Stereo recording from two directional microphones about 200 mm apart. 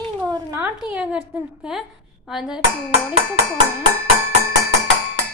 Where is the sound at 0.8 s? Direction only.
5° right (ahead or behind).